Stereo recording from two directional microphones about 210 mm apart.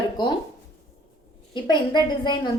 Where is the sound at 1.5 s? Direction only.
20° left (ahead or behind).